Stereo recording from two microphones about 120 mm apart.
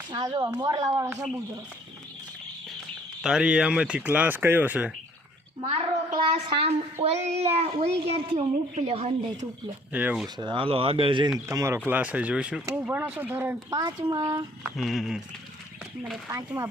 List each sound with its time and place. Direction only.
0.3 s speech: 35° right (ahead or behind)
3.2 s speech: 5° right (ahead or behind)
5.7 s a child's voice: 50° right (ahead or behind)
7.0 s a child's voice: 60° right (ahead or behind)
9.9 s speech: 15° right (ahead or behind)
10.3 s a child's voice: 40° right (ahead or behind)
11.4 s speech: 25° right (ahead or behind)
11.9 s speech: 15° right (ahead or behind)
13.7 s speech: 30° right (ahead or behind)
14.8 s speech: centre (ahead or behind)